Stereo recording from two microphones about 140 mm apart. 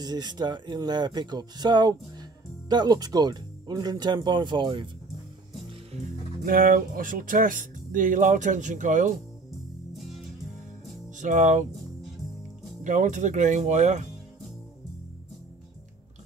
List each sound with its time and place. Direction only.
0.0 s speech: 30° right (ahead or behind)
6.4 s speech: 90° right; by 9.2 s 65° right (ahead or behind)
11.1 s speech: 65° right (ahead or behind)
12.8 s speech: 60° right (ahead or behind)